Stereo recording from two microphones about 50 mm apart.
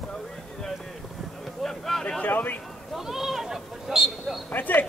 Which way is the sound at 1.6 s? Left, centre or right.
Centre.